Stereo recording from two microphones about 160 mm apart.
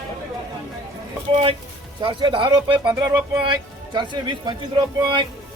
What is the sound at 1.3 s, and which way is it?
Speech, 35° right (ahead or behind).